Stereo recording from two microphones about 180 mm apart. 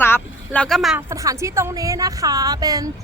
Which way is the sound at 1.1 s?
15° right (ahead or behind).